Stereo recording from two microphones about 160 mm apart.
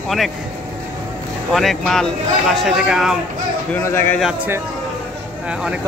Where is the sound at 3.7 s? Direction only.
15° left (ahead or behind).